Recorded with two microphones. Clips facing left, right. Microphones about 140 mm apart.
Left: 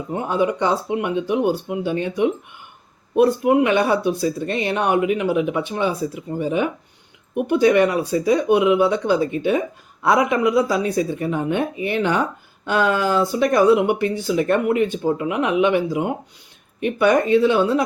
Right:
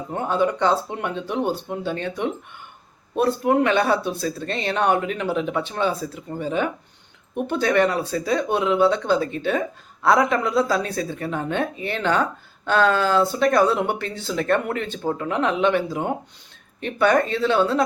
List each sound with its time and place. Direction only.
0.1 s speech: 10° left (ahead or behind)